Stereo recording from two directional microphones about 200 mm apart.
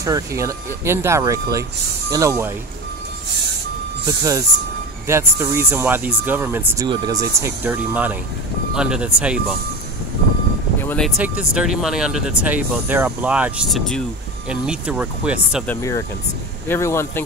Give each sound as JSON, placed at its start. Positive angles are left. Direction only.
{"t": 0.0, "sound": "speech", "side_deg": -15}
{"t": 4.2, "sound": "speech", "side_deg": -15}
{"t": 10.8, "sound": "music", "side_deg": 10}
{"t": 11.1, "sound": "speech", "side_deg": -5}
{"t": 15.6, "sound": "a man's voice", "side_deg": 10}